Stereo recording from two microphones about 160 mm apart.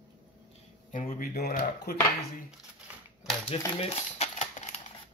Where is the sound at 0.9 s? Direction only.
60° left (ahead or behind).